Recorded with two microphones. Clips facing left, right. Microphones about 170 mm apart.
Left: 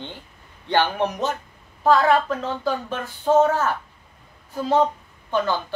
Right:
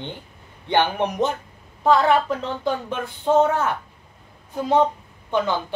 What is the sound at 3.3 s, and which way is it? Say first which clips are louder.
Speech: left 1 dB; 15° right (ahead or behind).